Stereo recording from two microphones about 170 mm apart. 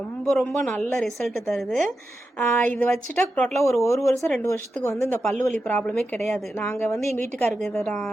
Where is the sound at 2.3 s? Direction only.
10° left (ahead or behind).